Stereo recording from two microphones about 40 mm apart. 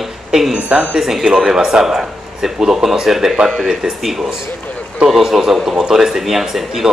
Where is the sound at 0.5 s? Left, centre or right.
Right.